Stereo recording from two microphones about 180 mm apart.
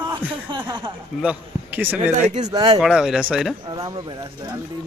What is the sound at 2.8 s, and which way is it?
Speech, centre (ahead or behind).